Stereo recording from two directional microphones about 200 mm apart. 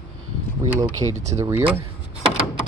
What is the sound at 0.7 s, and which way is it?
Speech, 10° right (ahead or behind).